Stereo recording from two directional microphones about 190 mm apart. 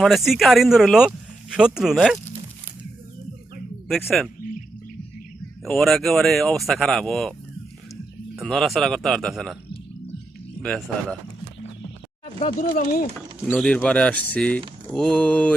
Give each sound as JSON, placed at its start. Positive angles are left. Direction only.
{"t": 0.0, "sound": "speech", "side_deg": 0}
{"t": 3.8, "sound": "speech", "side_deg": 0}
{"t": 5.6, "sound": "speech", "side_deg": 0}
{"t": 8.4, "sound": "speech", "side_deg": 0}
{"t": 10.6, "sound": "speech", "side_deg": 5}
{"t": 12.2, "sound": "speech", "side_deg": 40}
{"t": 13.5, "sound": "speech", "side_deg": 5}